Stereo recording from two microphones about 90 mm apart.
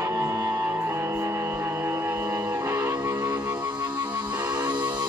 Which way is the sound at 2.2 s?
45° right (ahead or behind).